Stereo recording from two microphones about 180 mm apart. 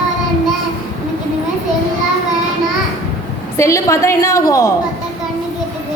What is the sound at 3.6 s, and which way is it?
A woman's voice, 15° left (ahead or behind).